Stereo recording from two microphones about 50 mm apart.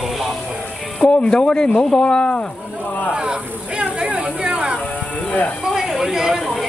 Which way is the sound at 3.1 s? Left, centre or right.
Centre.